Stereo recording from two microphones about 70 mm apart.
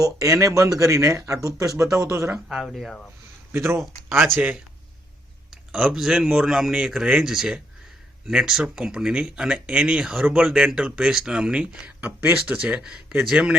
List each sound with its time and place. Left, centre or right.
0.0 s speech: right
2.5 s speech: centre
3.5 s speech: right
5.5 s speech: centre
12.0 s speech: right; by 13.5 s centre